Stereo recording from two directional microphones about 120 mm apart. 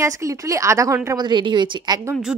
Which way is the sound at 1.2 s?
40° right (ahead or behind).